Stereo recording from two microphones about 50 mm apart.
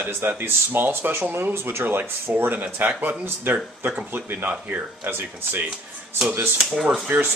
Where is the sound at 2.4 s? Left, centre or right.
Right.